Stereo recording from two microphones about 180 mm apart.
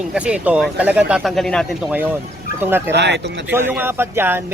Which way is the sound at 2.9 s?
70° right (ahead or behind).